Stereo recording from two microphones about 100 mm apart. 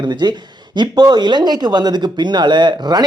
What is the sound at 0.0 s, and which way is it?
Speech, 45° right (ahead or behind).